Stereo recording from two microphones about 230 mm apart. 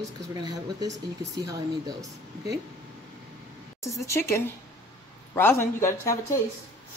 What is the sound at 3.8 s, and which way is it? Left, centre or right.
Speech, centre.